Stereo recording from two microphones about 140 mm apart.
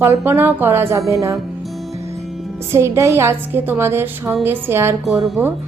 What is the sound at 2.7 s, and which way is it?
A woman's voice, 20° right (ahead or behind).